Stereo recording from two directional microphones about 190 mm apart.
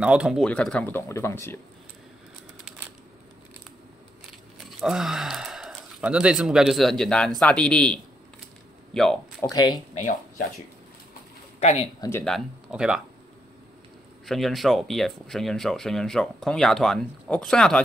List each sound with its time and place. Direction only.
0.0 s speech: 5° right (ahead or behind); by 1.6 s 10° left (ahead or behind)
4.7 s speech: centre (ahead or behind)
9.4 s speech: 20° left (ahead or behind)
9.9 s speech: 45° left (ahead or behind)
11.6 s speech: 35° left (ahead or behind)
12.0 s speech: 10° left (ahead or behind)
12.3 s speech: centre (ahead or behind)
14.2 s speech: centre (ahead or behind)